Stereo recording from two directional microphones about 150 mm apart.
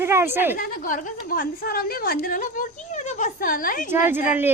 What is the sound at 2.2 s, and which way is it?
A woman's voice, 65° left (ahead or behind).